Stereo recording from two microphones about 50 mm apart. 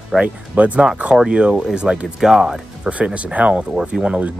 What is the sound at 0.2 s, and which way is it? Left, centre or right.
Speech, right.